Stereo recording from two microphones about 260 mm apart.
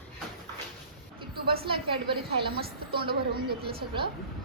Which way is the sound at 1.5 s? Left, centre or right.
Centre.